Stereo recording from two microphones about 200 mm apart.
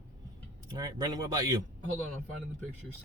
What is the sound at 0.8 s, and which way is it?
Speech, 20° right (ahead or behind).